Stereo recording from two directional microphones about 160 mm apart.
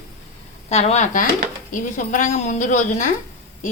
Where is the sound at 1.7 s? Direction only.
55° left (ahead or behind).